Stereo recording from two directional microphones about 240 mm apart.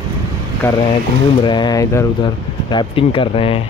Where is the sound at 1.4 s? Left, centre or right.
Centre.